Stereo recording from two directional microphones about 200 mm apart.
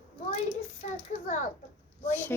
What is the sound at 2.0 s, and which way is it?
Speech, 10° left (ahead or behind).